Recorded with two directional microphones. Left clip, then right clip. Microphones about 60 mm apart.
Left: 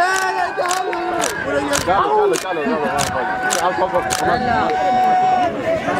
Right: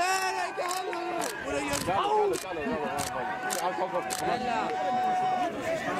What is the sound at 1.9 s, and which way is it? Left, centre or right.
Speech, right.